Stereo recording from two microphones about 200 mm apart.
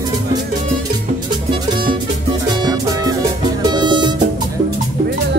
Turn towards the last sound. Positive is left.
turn(degrees=-20)  # may be behind; listen again after turning